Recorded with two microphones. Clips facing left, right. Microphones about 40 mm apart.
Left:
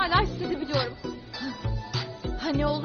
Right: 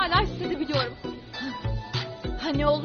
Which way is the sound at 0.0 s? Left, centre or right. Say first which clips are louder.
Even; right.